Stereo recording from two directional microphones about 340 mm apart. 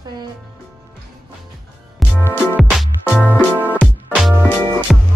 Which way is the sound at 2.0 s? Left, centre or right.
Centre.